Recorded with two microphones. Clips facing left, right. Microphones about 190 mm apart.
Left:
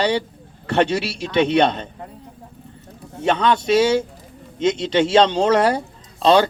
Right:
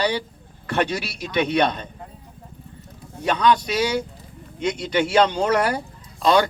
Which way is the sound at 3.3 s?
25° left (ahead or behind).